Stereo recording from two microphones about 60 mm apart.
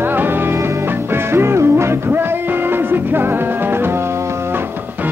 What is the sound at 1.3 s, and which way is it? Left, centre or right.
Music, right.